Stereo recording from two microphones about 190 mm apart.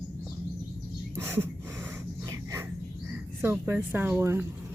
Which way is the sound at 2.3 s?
15° right (ahead or behind).